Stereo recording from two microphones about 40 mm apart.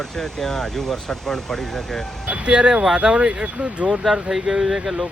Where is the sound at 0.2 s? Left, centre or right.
Centre.